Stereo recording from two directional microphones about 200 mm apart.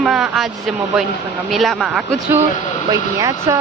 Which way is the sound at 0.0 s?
Centre (ahead or behind).